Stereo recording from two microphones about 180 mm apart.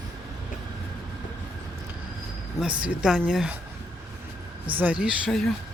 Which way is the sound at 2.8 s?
5° right (ahead or behind).